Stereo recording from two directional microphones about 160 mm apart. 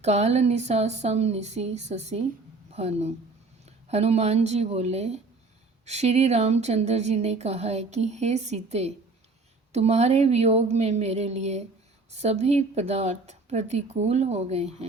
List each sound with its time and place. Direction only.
0.0 s a woman's voice: 45° right (ahead or behind)